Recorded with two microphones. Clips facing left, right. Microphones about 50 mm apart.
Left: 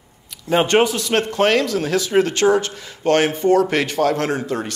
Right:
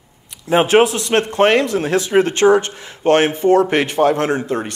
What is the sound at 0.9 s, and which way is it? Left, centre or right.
A man's voice, right.